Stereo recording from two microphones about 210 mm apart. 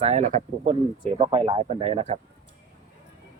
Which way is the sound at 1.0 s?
25° right (ahead or behind).